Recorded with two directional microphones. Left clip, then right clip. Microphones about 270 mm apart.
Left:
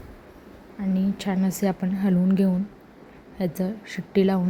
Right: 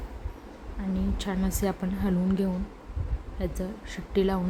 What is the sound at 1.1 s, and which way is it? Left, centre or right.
A woman's voice, centre.